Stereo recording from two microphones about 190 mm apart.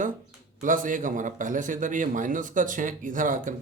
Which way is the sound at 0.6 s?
45° right (ahead or behind).